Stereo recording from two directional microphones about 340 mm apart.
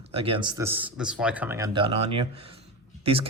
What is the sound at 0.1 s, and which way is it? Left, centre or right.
Speech, centre.